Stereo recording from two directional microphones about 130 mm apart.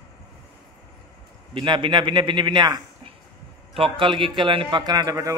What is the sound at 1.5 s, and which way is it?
A man's voice, 40° right (ahead or behind).